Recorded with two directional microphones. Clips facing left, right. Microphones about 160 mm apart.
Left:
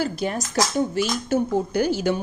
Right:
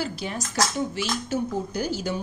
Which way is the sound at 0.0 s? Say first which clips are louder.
Left 5 dB; 50° left (ahead or behind).